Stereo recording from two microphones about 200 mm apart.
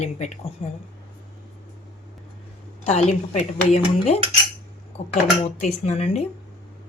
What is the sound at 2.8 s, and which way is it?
A woman's voice, 30° left (ahead or behind).